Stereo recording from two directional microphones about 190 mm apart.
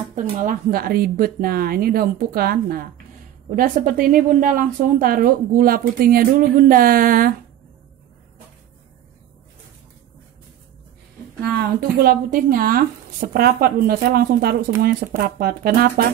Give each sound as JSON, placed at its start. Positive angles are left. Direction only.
{"t": 0.1, "sound": "speech", "side_deg": -40}
{"t": 11.4, "sound": "speech", "side_deg": -55}